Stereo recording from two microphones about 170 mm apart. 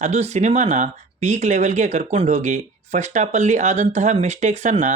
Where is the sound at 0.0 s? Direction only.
40° right (ahead or behind).